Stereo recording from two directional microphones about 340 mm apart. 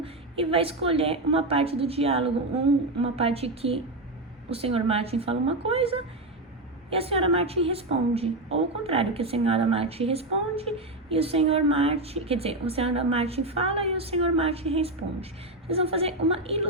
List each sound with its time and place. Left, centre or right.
0.0 s a woman's voice: centre